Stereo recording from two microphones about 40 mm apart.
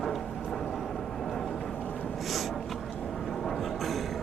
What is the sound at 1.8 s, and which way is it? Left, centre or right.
Snort, left.